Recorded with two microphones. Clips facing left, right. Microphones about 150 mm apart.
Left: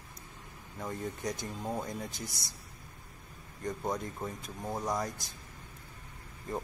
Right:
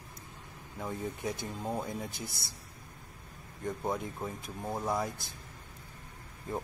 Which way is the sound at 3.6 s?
5° right (ahead or behind).